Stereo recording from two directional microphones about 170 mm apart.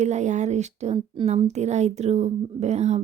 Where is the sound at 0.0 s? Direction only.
45° right (ahead or behind).